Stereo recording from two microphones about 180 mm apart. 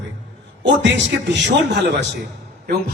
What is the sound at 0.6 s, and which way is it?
A man's voice, 80° right.